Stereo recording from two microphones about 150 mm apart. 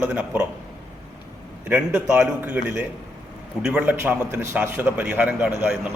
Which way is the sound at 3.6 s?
10° right (ahead or behind).